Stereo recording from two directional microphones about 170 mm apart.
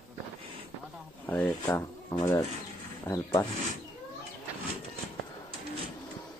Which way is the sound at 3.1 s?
15° left (ahead or behind).